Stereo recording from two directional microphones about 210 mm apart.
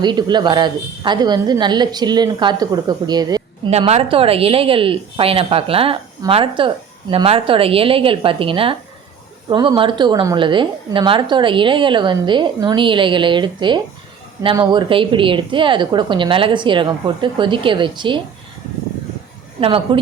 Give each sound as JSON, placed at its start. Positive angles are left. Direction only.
{"t": 0.0, "sound": "a woman's voice", "side_deg": -20}
{"t": 3.7, "sound": "a woman's voice", "side_deg": -30}
{"t": 19.5, "sound": "a woman's voice", "side_deg": -25}